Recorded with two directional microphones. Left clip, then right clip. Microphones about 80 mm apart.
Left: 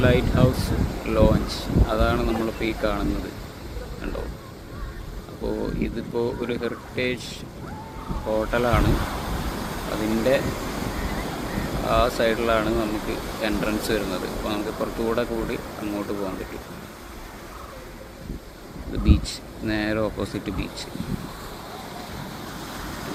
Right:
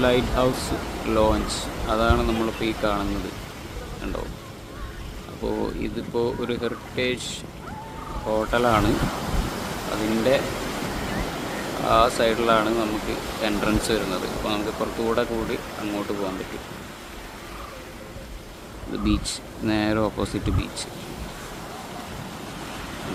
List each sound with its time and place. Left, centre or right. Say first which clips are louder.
0.1 s speech: right 1 dB; centre
6.1 s speech: right 1 dB; centre
8.3 s speech: right 2 dB; right
18.9 s speech: right 1 dB; right